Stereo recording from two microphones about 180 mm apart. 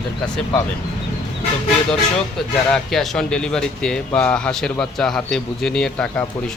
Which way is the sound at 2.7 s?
Centre (ahead or behind).